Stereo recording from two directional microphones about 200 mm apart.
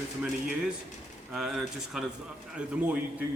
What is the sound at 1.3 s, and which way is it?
A man's voice, centre (ahead or behind).